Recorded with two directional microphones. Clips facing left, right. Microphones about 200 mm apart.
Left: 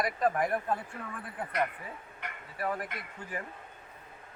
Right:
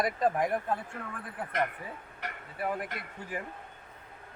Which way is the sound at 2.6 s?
15° right (ahead or behind).